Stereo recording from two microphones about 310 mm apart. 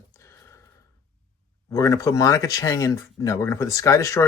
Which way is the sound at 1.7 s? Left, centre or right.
Centre.